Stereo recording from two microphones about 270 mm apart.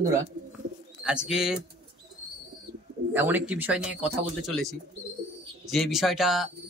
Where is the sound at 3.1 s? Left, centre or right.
Centre.